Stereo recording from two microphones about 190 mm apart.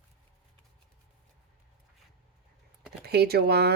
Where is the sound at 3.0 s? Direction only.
55° right (ahead or behind).